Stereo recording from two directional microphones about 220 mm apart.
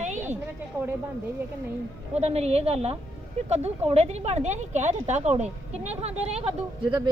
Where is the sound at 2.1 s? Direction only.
30° right (ahead or behind).